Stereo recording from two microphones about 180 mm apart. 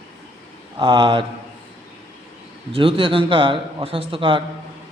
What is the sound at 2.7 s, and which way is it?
A man's voice, 30° right (ahead or behind).